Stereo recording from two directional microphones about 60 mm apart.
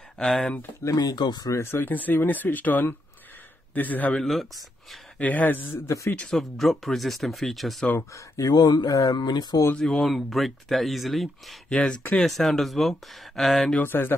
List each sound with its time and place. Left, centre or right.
0.2 s speech: centre
0.8 s speech: left
1.6 s speech: left
1.9 s speech: left
4.1 s speech: centre
5.2 s speech: left
5.7 s speech: left
6.3 s speech: centre
8.1 s speech: left
9.8 s speech: centre
13.7 s speech: left